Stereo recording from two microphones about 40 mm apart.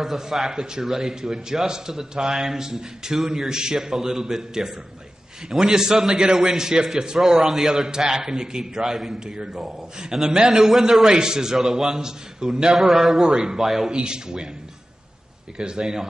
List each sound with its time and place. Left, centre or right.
0.0 s a man's voice: centre
12.7 s a man's voice: centre
13.9 s speech: right
15.5 s a man's voice: centre